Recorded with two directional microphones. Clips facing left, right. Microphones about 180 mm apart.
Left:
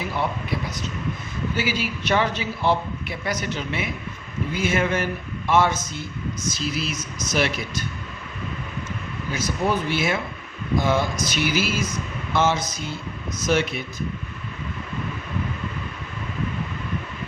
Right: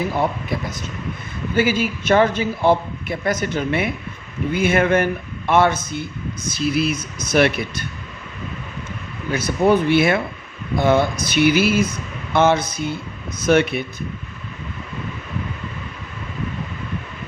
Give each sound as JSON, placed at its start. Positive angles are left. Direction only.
{"t": 1.5, "sound": "a man's voice", "side_deg": -50}
{"t": 9.3, "sound": "speech", "side_deg": -60}